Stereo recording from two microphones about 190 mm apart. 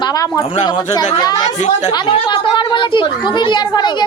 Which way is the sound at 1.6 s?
40° left (ahead or behind).